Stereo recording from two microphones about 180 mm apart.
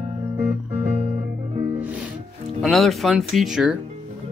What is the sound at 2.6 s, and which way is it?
Speech, centre (ahead or behind).